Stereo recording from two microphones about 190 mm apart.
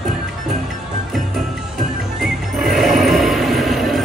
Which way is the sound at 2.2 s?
Centre (ahead or behind).